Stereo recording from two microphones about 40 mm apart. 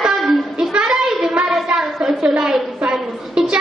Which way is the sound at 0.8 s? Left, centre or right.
Centre.